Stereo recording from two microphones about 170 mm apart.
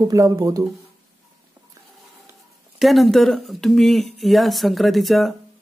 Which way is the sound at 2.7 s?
Centre (ahead or behind).